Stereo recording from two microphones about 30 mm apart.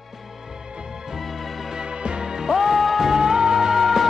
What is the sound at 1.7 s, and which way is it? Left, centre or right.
Music, right.